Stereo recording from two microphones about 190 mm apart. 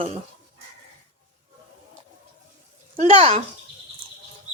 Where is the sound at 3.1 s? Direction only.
30° right (ahead or behind).